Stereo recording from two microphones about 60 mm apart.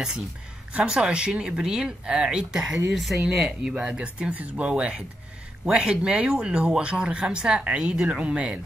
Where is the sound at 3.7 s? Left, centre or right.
Centre.